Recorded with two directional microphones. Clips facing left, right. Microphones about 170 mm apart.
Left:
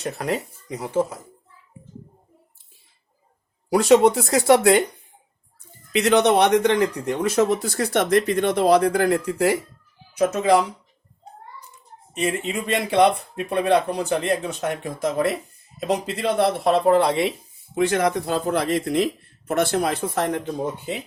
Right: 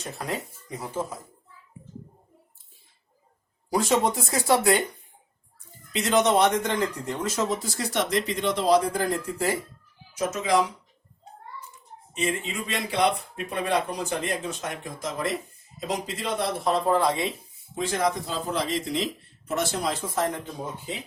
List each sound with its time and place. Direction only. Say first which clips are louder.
0.0 s speech: left 7 dB; 70° left (ahead or behind)
3.7 s speech: left 8 dB; 70° left (ahead or behind)
5.9 s speech: left 5 dB; 65° left (ahead or behind)
10.2 s speech: left 7 dB; 60° left (ahead or behind)
12.1 s speech: left 4 dB; 60° left (ahead or behind)